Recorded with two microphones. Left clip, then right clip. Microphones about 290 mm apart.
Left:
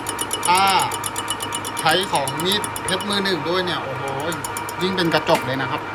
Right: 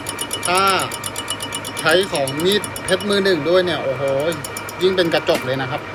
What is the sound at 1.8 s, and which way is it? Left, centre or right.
Speech, centre.